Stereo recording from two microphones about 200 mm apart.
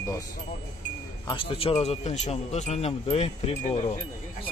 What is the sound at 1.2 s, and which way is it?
Speech, 25° left (ahead or behind).